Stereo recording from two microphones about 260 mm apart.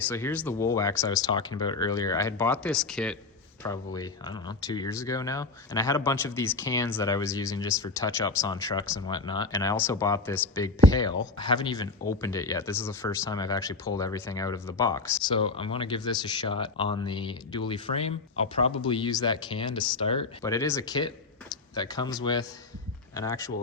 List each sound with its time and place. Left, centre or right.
0.1 s speech: centre
3.6 s speech: centre